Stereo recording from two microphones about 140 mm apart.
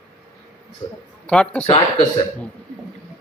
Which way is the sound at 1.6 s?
45° left (ahead or behind).